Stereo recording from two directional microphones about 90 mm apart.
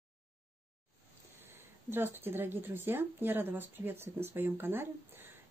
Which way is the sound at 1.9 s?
25° right (ahead or behind).